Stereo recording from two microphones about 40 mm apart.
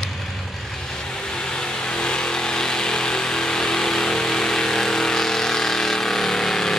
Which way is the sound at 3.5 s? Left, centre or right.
Centre.